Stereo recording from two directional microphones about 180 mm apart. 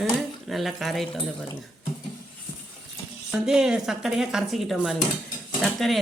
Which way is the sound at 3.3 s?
5° right (ahead or behind).